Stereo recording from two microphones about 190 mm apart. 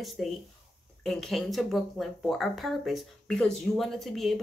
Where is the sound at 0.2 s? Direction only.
Centre (ahead or behind).